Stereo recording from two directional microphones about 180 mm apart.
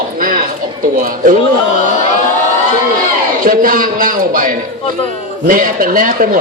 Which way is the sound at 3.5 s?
50° right (ahead or behind).